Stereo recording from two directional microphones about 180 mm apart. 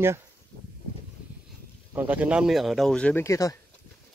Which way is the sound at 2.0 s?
10° right (ahead or behind).